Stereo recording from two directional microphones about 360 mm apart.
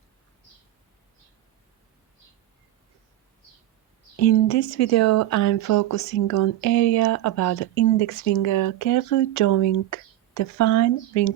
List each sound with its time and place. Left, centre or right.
4.2 s speech: left